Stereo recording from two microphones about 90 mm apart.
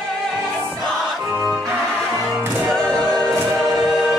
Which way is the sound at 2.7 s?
5° left (ahead or behind).